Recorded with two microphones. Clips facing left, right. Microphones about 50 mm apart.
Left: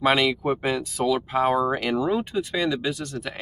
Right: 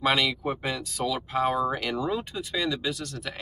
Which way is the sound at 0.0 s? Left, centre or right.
Centre.